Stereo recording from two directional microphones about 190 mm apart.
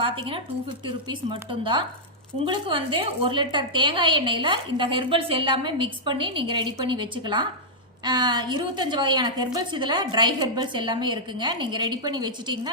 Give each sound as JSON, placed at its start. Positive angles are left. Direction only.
{"t": 0.0, "sound": "a woman's voice", "side_deg": -25}